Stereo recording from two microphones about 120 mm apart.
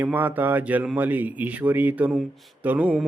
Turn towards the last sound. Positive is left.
turn(degrees=-10)  # may be behind; listen again after turning